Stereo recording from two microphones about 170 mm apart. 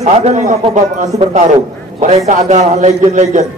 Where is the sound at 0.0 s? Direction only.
40° right (ahead or behind).